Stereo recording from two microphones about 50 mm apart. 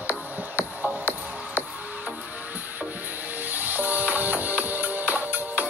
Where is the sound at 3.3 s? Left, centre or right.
Right.